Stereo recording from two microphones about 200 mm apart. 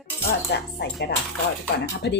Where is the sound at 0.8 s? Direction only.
55° left (ahead or behind).